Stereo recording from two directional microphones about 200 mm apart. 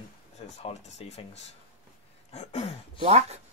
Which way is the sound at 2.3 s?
35° left (ahead or behind).